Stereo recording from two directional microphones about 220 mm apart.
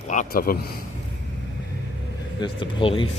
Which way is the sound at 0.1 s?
40° left (ahead or behind).